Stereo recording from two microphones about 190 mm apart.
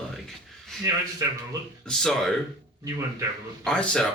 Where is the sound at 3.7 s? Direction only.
5° left (ahead or behind).